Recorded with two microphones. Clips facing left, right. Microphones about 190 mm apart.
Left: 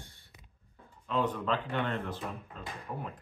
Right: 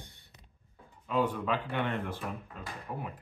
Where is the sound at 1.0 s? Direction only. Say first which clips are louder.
Right 1 dB; 10° right (ahead or behind).